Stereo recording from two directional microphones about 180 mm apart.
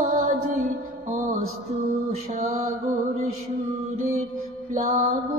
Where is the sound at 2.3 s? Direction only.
40° right (ahead or behind).